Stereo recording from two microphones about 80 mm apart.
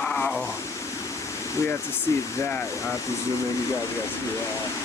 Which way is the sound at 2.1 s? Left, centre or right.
Left.